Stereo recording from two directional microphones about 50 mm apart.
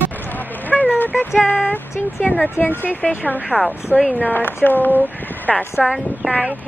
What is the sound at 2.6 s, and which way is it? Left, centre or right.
Speech, left.